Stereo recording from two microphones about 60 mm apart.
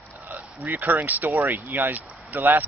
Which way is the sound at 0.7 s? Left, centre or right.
Right.